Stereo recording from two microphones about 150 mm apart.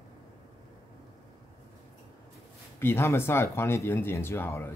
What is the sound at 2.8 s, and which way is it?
A man's voice, 15° left (ahead or behind).